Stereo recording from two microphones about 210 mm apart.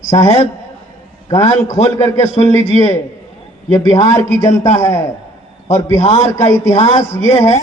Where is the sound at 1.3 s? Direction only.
15° left (ahead or behind).